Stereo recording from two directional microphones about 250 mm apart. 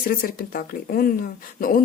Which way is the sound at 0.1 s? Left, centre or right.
Left.